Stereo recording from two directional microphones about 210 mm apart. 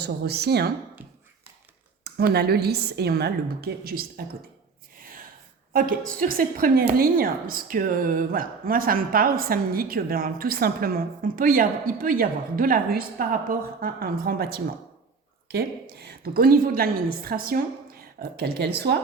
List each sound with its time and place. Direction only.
0.0 s speech: 50° right (ahead or behind)
1.0 s a sound: 10° right (ahead or behind)
2.0 s speech: 50° right (ahead or behind)
5.7 s a woman's voice: 45° right (ahead or behind)